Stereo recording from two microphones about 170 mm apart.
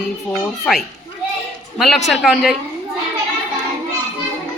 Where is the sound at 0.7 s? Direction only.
5° left (ahead or behind).